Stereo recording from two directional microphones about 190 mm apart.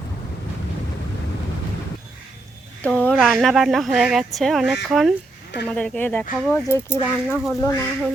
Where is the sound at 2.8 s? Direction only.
5° left (ahead or behind).